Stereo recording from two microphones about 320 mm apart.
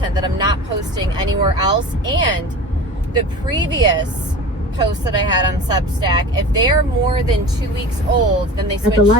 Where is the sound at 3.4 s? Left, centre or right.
Centre.